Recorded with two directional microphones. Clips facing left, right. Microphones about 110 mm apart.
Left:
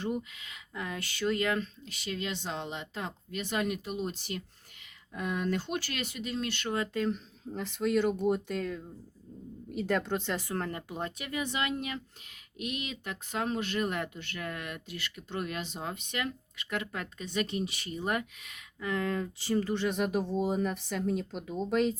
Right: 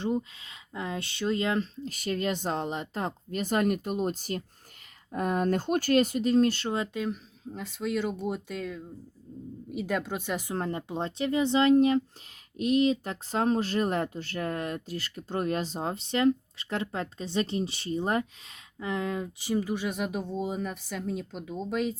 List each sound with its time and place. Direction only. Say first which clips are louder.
0.0 s speech: right 4 dB; 25° right (ahead or behind)
1.9 s speech: right 7 dB; 45° right (ahead or behind)
6.7 s speech: right 2 dB; 20° right (ahead or behind)
7.0 s speech: left 1 dB; 5° right (ahead or behind)